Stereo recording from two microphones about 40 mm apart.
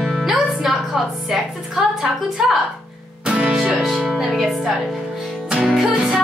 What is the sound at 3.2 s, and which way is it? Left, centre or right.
Music, right.